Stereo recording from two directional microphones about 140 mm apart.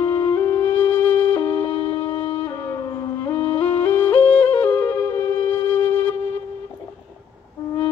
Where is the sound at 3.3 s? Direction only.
35° left (ahead or behind).